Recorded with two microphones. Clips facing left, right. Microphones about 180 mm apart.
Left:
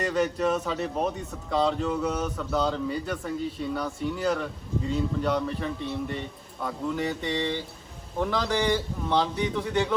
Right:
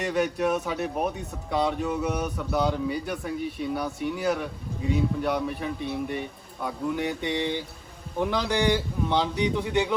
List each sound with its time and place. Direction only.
0.0 s a man's voice: 15° right (ahead or behind)